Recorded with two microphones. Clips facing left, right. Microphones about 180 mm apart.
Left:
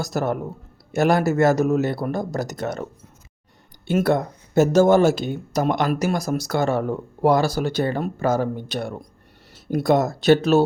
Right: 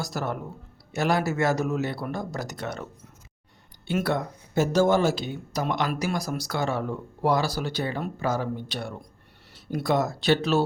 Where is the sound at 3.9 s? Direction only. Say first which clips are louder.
Left 6 dB; 45° left (ahead or behind).